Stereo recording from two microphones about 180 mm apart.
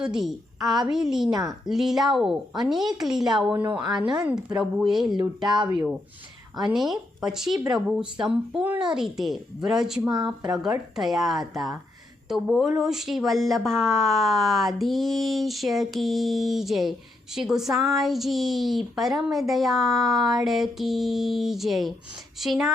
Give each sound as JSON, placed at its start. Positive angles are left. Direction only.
{"t": 0.0, "sound": "speech", "side_deg": -5}
{"t": 1.3, "sound": "a woman's voice", "side_deg": -20}
{"t": 1.6, "sound": "speech", "side_deg": 0}
{"t": 3.9, "sound": "a woman's voice", "side_deg": -25}
{"t": 4.2, "sound": "speech", "side_deg": -5}
{"t": 5.6, "sound": "speech", "side_deg": -10}